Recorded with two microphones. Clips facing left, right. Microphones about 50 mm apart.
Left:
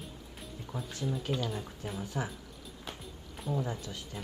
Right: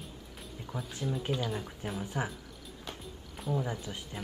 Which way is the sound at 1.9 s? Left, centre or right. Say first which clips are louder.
Right 1 dB; right.